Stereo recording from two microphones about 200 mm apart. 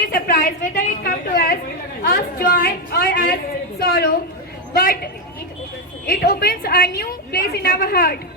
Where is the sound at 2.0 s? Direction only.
50° left (ahead or behind).